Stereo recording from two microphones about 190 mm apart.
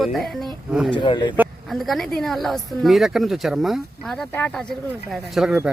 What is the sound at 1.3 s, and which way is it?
A woman's voice, 5° right (ahead or behind).